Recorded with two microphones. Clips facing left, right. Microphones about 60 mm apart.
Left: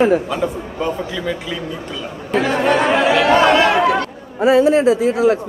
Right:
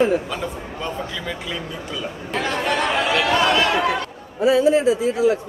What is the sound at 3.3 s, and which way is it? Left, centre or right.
Speech, left.